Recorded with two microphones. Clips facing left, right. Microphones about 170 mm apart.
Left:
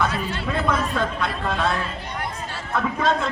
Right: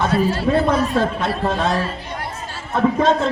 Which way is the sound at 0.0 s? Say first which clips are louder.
Right 7 dB; 35° right (ahead or behind).